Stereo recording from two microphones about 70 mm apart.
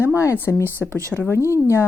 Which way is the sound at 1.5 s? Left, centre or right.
Left.